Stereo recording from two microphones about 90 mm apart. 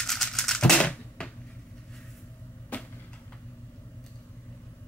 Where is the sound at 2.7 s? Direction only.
15° left (ahead or behind).